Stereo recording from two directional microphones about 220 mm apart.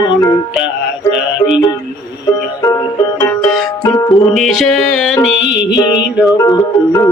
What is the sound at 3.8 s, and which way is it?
Music, 15° left (ahead or behind).